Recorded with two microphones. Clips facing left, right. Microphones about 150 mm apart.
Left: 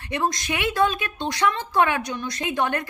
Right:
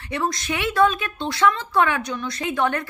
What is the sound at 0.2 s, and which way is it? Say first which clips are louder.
A woman's voice: even; 20° left (ahead or behind).